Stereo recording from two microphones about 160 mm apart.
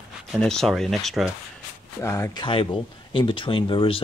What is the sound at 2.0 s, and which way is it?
Speech, 20° left (ahead or behind).